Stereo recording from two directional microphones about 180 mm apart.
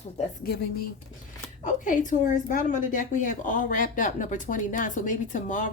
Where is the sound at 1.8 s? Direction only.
45° left (ahead or behind).